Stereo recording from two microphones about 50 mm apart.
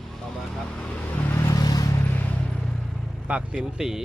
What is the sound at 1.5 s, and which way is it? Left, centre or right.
Vehicle, left.